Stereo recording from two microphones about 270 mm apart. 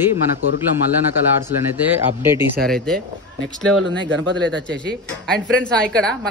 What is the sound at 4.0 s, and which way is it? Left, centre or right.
Speech, right.